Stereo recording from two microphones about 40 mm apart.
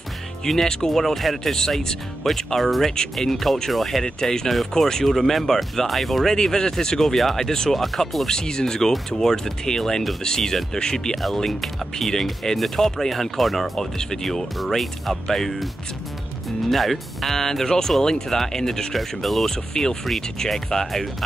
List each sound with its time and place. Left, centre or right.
0.5 s speech: centre
4.0 s speech: centre
6.3 s speech: centre
7.7 s speech: centre
8.3 s speech: centre
11.2 s speech: centre
13.7 s speech: centre
14.6 s speech: centre
19.4 s speech: centre